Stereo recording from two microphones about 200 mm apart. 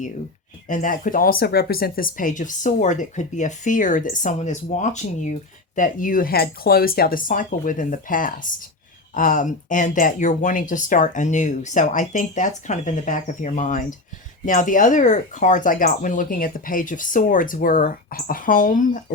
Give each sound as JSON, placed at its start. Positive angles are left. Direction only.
{"t": 0.7, "sound": "speech", "side_deg": 40}